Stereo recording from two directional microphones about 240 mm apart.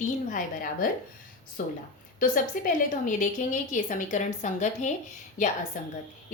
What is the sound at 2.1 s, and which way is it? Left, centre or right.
A woman's voice, left.